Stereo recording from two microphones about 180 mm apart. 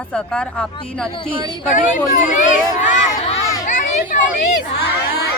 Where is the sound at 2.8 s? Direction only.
45° left (ahead or behind).